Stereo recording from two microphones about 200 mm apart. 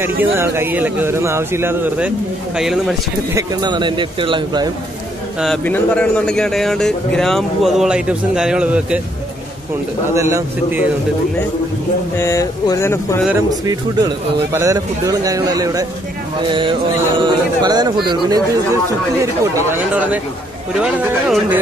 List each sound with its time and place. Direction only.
0.0 s speech: 10° right (ahead or behind)
3.3 s speech: 20° right (ahead or behind)
5.4 s a man's voice: 5° left (ahead or behind)
10.1 s speech: 15° right (ahead or behind)
12.2 s speech: 15° left (ahead or behind)
13.7 s a man's voice: 15° right (ahead or behind)